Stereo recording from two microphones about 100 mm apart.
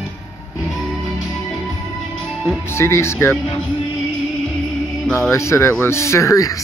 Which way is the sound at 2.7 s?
25° left (ahead or behind).